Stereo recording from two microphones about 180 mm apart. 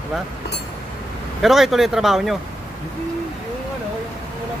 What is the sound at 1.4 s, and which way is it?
Speech, centre (ahead or behind).